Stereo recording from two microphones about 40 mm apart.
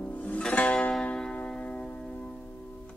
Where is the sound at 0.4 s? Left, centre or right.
Left.